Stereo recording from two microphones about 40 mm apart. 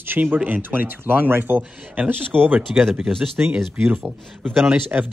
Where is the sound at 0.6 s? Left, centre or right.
Right.